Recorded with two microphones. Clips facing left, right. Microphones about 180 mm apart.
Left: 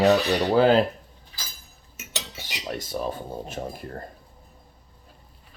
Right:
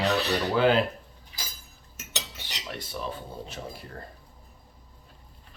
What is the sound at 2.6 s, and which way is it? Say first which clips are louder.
Speech: left 6 dB; 40° left (ahead or behind).